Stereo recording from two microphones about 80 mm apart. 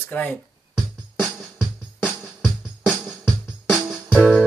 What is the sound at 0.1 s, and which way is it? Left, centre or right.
Speech, centre.